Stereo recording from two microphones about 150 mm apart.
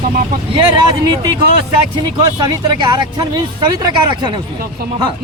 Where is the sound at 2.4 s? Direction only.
30° right (ahead or behind).